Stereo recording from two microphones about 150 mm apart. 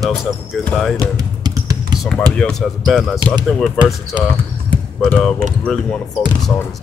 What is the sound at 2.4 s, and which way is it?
Speech, 5° left (ahead or behind).